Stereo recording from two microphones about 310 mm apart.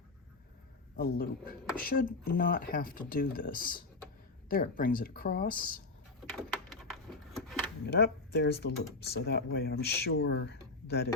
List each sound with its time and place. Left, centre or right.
0.9 s speech: left
6.3 s a sound: centre
7.9 s speech: left